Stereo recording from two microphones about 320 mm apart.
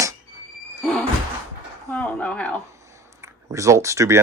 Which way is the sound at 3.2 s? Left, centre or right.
Centre.